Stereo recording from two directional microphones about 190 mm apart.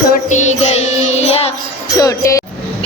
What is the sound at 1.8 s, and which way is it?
Music, 20° left (ahead or behind).